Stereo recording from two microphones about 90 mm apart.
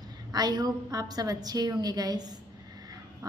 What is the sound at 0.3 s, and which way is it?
A woman's voice, 45° right (ahead or behind).